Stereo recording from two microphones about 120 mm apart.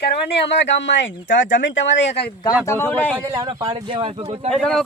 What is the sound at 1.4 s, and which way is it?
Speech, 90° left.